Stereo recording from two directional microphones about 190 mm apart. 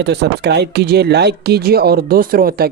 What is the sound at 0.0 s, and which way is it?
Speech, 60° right (ahead or behind).